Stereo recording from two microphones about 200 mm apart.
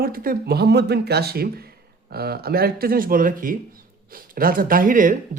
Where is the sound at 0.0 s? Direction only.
45° right (ahead or behind).